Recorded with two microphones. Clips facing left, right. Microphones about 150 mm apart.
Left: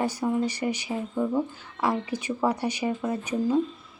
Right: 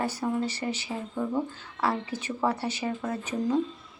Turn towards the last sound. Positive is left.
turn(degrees=10)  # may be behind; listen again after turning